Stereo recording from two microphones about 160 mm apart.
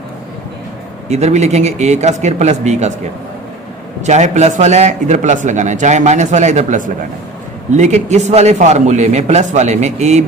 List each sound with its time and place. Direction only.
1.1 s a man's voice: 45° right (ahead or behind)
4.0 s a man's voice: 45° right (ahead or behind)